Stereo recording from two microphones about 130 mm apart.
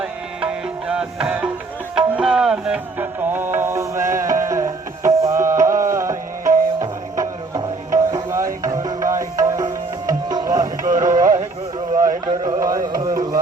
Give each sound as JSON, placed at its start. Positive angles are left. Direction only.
{"t": 0.0, "sound": "music", "side_deg": -5}
{"t": 10.9, "sound": "a sound", "side_deg": -25}
{"t": 12.5, "sound": "carnatic music", "side_deg": -25}